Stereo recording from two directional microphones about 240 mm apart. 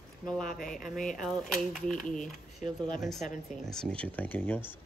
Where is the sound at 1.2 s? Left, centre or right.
Centre.